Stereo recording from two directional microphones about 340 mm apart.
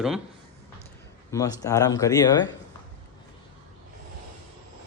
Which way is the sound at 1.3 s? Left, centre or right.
Centre.